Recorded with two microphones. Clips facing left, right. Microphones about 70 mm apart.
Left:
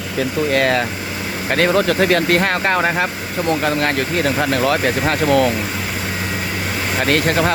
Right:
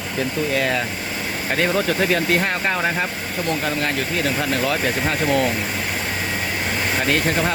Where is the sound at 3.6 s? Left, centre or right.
Left.